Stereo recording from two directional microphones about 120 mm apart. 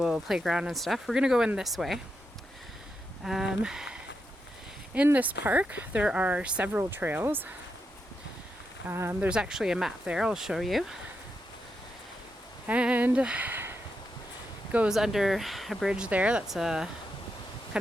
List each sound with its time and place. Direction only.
0.0 s speech: 5° right (ahead or behind)
3.2 s speech: 5° right (ahead or behind)
4.9 s speech: 10° right (ahead or behind)
8.9 s speech: 20° right (ahead or behind)
9.3 s speech: 5° right (ahead or behind)
12.6 s speech: 10° right (ahead or behind)
14.9 s speech: 5° right (ahead or behind)